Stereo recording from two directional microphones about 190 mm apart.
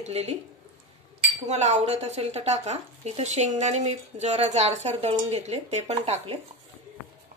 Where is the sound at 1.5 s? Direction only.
35° right (ahead or behind).